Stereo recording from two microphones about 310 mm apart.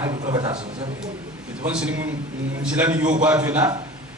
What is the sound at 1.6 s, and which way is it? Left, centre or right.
A man's voice, centre.